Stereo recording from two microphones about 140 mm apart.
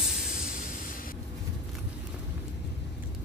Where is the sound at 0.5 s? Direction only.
85° left.